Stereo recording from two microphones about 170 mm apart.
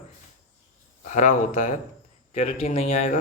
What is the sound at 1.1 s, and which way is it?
Speech, 45° left (ahead or behind).